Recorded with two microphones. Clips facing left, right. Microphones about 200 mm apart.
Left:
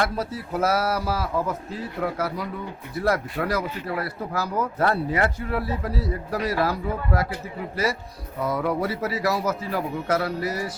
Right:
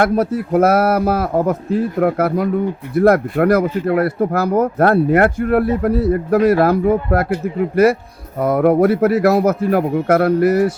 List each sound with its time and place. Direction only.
0.0 s speech: 55° right (ahead or behind)
8.4 s speech: 55° right (ahead or behind)